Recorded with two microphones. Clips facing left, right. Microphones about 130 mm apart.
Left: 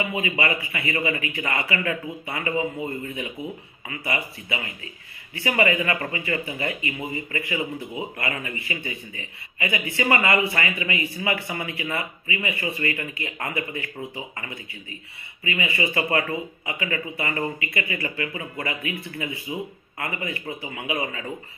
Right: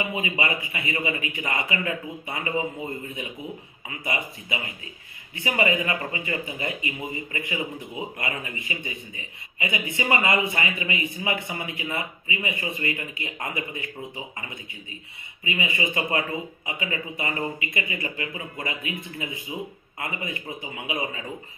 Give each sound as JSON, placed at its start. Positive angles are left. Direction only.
{"t": 0.0, "sound": "speech", "side_deg": -15}
{"t": 4.0, "sound": "speech", "side_deg": -15}